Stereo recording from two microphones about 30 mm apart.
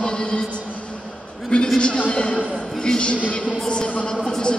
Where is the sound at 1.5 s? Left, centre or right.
Left.